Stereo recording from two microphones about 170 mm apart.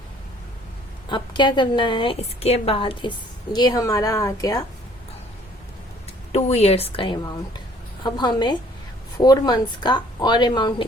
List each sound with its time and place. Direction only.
1.1 s a woman's voice: 25° left (ahead or behind)
6.3 s a woman's voice: 35° left (ahead or behind)